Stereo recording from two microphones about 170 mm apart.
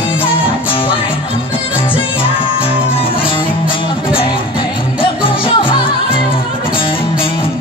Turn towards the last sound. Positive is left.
turn(degrees=30)  # may be behind; listen again after turning